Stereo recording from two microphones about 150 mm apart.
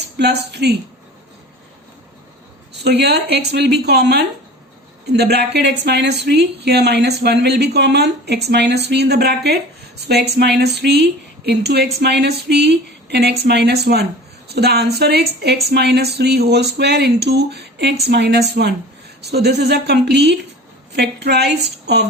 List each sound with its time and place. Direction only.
0.2 s speech: 90° right
2.8 s speech: 90° right